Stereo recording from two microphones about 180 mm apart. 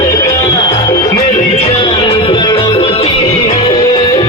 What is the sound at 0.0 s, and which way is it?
Music, 20° left (ahead or behind).